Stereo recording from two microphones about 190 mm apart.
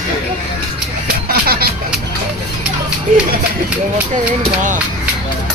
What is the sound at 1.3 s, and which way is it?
Music, 50° right (ahead or behind).